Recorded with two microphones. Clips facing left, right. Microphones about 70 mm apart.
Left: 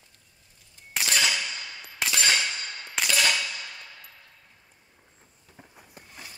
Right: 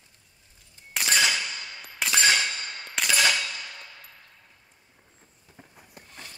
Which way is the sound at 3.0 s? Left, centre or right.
Centre.